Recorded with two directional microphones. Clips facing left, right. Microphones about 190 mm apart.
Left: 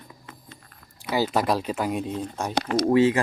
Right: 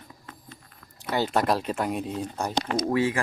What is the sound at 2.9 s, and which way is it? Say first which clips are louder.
Speech: left 7 dB; 20° left (ahead or behind).